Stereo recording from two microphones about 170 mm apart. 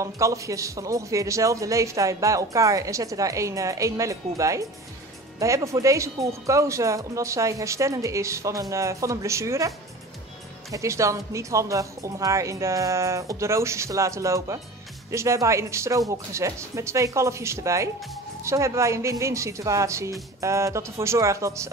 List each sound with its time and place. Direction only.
0.0 s a man's voice: 20° right (ahead or behind)
10.7 s speech: 20° right (ahead or behind)